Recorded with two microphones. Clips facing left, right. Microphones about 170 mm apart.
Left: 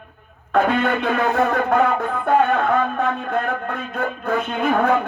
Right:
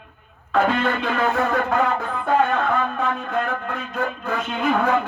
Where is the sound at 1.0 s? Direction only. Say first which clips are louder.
Left 3 dB; 60° left (ahead or behind).